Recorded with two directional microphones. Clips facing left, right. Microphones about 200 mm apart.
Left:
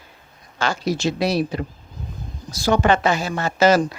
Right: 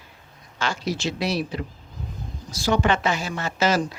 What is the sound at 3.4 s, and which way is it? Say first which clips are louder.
Speech: left 7 dB; 55° left (ahead or behind).